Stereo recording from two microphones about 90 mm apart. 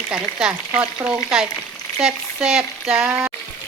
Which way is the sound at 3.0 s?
15° right (ahead or behind).